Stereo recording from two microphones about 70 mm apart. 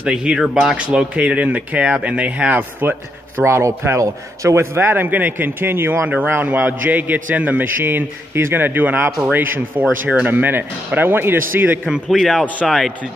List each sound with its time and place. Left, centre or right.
0.0 s a man's voice: centre; by 6.0 s right
6.0 s a man's voice: right
11.8 s speech: centre
12.2 s speech: centre